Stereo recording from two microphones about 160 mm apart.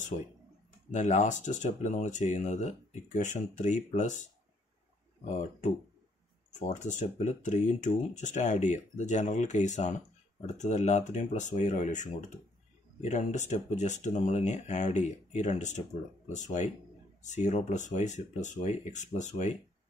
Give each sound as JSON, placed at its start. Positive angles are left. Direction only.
{"t": 0.1, "sound": "speech", "side_deg": 50}
{"t": 5.2, "sound": "speech", "side_deg": 45}
{"t": 6.7, "sound": "speech", "side_deg": 50}